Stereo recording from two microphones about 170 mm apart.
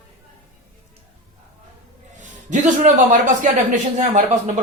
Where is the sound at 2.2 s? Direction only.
45° right (ahead or behind).